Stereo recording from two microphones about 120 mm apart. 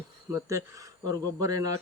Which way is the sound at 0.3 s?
25° right (ahead or behind).